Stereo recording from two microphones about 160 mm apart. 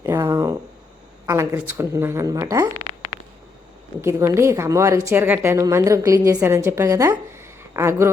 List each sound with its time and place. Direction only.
0.0 s a sound: 15° right (ahead or behind)
1.3 s speech: 15° right (ahead or behind)
4.0 s speech: 15° right (ahead or behind)